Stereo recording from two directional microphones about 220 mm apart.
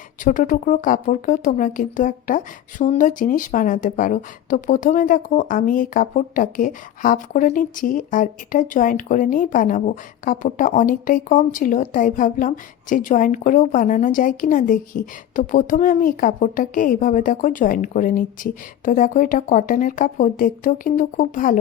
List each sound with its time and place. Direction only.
0.3 s speech: 35° left (ahead or behind)